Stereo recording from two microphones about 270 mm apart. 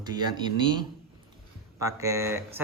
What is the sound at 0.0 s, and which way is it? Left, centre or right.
Speech, centre.